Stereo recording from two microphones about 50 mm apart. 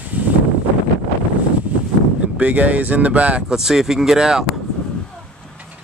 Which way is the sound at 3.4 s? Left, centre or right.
Centre.